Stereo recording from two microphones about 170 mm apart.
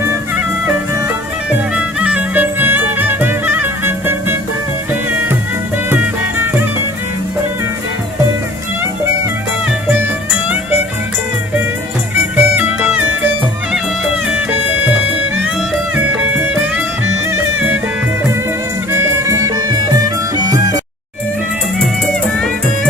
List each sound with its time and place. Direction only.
0.9 s music: 15° right (ahead or behind)
12.4 s music: 10° right (ahead or behind)
18.9 s music: 15° right (ahead or behind)
22.0 s music: 5° left (ahead or behind)